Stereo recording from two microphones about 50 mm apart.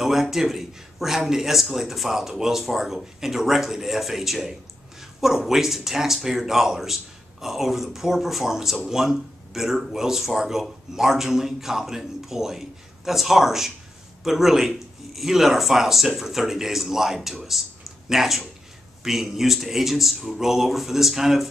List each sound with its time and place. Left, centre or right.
0.0 s speech: centre